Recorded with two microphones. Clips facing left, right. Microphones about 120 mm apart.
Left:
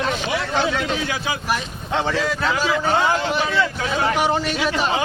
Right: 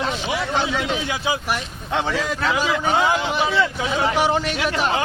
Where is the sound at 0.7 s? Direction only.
15° right (ahead or behind).